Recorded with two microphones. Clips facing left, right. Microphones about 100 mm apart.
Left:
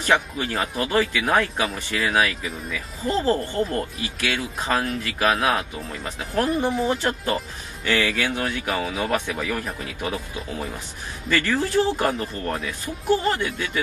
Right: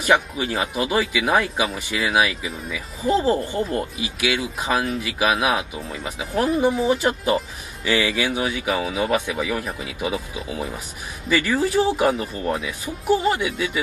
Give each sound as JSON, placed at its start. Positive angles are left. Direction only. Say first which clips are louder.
{"t": 0.0, "sound": "speech", "louder": "right 2 dB", "side_deg": -10}